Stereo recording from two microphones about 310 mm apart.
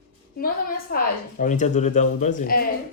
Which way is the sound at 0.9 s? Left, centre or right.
Left.